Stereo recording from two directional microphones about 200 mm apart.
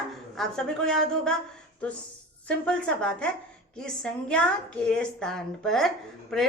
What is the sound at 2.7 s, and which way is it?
A woman's voice, 5° left (ahead or behind).